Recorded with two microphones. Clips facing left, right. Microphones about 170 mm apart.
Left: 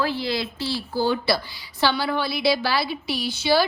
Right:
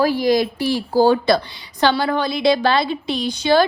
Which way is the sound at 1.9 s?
55° right (ahead or behind).